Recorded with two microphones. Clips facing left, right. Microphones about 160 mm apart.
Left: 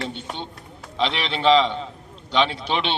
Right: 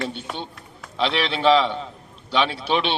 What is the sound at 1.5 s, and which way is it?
A man's voice, 20° left (ahead or behind).